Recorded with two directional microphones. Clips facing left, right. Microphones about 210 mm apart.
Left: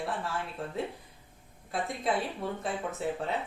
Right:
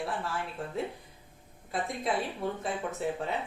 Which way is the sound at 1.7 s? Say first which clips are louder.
Left 1 dB; centre (ahead or behind).